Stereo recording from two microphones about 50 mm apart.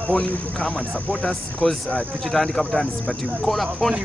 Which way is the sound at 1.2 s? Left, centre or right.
Centre.